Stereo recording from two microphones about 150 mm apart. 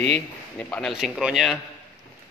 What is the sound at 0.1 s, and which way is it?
Speech, 10° left (ahead or behind).